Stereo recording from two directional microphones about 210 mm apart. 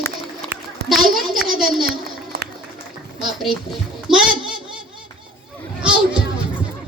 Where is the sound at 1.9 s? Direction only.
50° right (ahead or behind).